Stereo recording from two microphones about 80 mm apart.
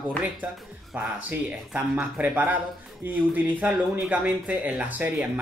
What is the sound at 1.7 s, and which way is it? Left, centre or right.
Speech, centre.